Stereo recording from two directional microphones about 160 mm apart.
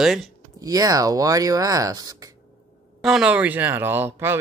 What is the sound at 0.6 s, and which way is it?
Speech, 20° right (ahead or behind).